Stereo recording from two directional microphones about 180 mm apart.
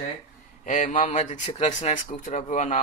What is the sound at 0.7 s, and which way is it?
Speech, 45° left (ahead or behind).